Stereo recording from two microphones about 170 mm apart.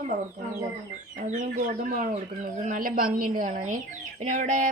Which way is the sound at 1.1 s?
45° right (ahead or behind).